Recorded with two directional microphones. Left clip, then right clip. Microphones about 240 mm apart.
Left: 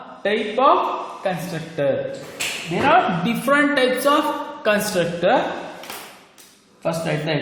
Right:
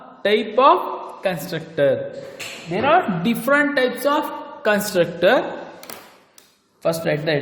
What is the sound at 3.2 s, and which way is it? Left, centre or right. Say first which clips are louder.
A man's voice: even; right.